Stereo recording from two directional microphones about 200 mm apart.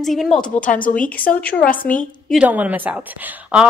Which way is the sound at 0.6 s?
40° left (ahead or behind).